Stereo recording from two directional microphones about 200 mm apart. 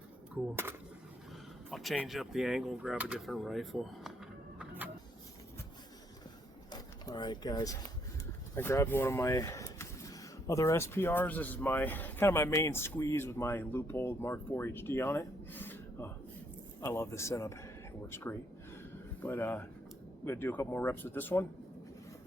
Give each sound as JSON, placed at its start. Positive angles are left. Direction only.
{"t": 0.3, "sound": "speech", "side_deg": -10}
{"t": 1.7, "sound": "speech", "side_deg": 0}
{"t": 4.6, "sound": "vehicle", "side_deg": -10}
{"t": 6.7, "sound": "a sound", "side_deg": 20}
{"t": 8.5, "sound": "speech", "side_deg": 15}